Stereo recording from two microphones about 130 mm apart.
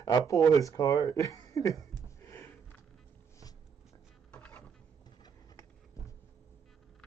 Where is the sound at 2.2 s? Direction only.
20° left (ahead or behind).